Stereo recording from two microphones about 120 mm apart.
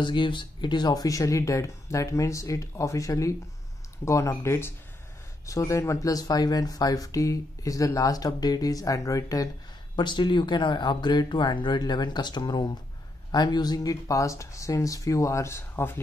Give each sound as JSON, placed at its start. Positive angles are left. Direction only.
{"t": 0.0, "sound": "speech", "side_deg": 40}
{"t": 9.9, "sound": "speech", "side_deg": 40}